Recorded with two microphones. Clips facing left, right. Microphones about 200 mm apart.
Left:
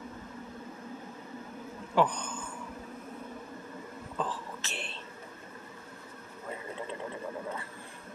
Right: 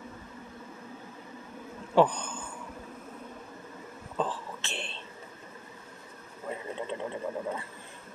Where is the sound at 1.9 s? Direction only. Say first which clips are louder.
Right 4 dB; 30° right (ahead or behind).